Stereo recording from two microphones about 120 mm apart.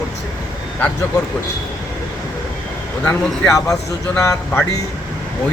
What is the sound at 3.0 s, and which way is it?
Speech, 25° left (ahead or behind).